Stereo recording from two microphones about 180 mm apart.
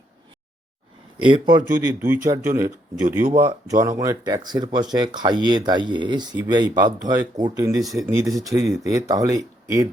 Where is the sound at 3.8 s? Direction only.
20° right (ahead or behind).